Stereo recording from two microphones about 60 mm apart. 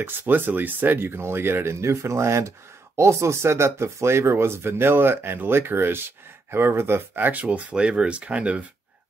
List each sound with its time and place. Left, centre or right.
0.0 s speech: right